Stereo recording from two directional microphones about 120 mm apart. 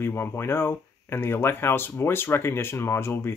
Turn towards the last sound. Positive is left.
turn(degrees=20)  # may be behind; listen again after turning